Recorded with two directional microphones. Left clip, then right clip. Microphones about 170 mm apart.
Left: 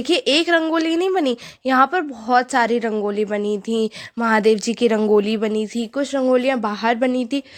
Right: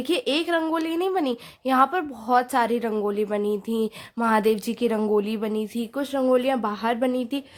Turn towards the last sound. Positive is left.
turn(degrees=20)  # may be behind; listen again after turning